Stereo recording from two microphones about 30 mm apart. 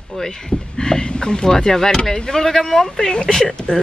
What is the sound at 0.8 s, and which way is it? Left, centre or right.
Speech, left.